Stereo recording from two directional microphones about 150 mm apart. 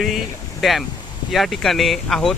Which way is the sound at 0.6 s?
Centre (ahead or behind).